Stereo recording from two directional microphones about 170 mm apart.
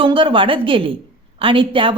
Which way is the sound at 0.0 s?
30° right (ahead or behind).